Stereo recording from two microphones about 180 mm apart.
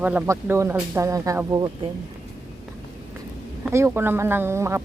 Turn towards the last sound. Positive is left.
turn(degrees=-15)  # may be behind; listen again after turning